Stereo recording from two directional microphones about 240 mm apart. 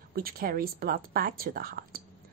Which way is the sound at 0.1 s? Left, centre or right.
Right.